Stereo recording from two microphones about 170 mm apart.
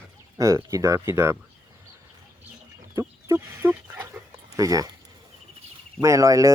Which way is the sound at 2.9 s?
15° right (ahead or behind).